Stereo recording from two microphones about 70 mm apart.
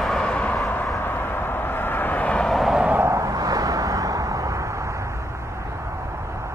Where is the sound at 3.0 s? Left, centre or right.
Right.